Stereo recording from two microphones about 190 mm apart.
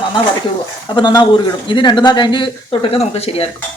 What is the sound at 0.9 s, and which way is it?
Dishes, 25° left (ahead or behind).